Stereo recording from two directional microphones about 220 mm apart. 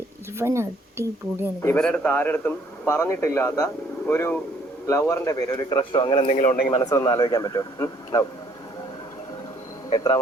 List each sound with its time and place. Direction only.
0.3 s speech: 10° right (ahead or behind)
1.6 s a man's voice: 5° left (ahead or behind); by 6.7 s 35° left (ahead or behind)
6.7 s a man's voice: 15° left (ahead or behind)
9.9 s a man's voice: 15° left (ahead or behind)